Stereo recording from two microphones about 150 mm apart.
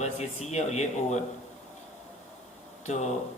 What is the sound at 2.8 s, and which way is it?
Speech, 50° left (ahead or behind).